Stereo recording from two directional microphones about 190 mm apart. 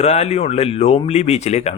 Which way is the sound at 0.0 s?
35° left (ahead or behind).